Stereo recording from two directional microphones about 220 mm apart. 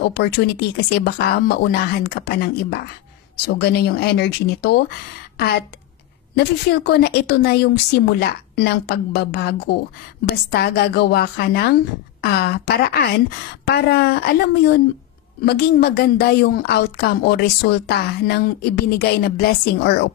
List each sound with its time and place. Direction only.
0.1 s a woman's voice: 45° left (ahead or behind)
6.3 s a woman's voice: 50° left (ahead or behind)